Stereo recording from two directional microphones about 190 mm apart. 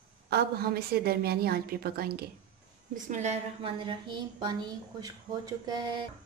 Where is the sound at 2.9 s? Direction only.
40° right (ahead or behind); by 6.0 s 25° right (ahead or behind).